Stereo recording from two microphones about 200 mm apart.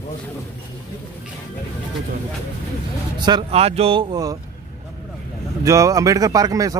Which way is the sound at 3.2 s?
20° right (ahead or behind).